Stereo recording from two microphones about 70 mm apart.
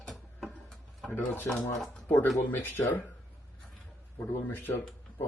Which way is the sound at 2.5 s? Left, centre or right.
Left.